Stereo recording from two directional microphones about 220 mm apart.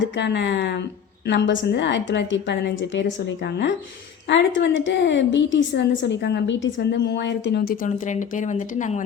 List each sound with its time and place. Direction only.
0.0 s a woman's voice: 55° left (ahead or behind); by 9.0 s 35° left (ahead or behind)